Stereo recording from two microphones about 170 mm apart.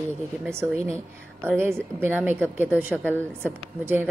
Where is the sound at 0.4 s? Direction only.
15° right (ahead or behind).